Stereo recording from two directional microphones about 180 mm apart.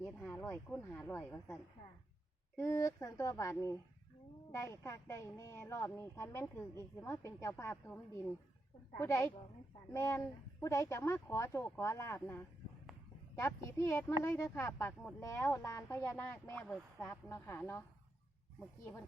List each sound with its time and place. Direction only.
0.0 s speech: 5° left (ahead or behind)
2.6 s speech: 15° left (ahead or behind)
9.0 s speech: 15° left (ahead or behind)